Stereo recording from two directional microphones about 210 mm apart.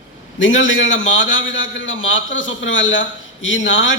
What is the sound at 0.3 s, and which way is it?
A man's voice, 60° left (ahead or behind).